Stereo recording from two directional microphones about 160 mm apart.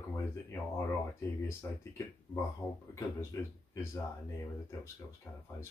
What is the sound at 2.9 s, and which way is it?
Speech, 15° left (ahead or behind).